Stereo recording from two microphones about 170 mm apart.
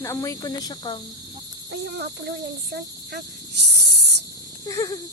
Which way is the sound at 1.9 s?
75° right (ahead or behind).